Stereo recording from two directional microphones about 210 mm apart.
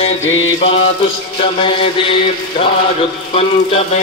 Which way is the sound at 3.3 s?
30° left (ahead or behind).